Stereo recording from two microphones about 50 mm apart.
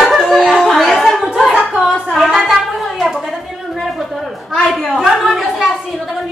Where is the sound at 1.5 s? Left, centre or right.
Right.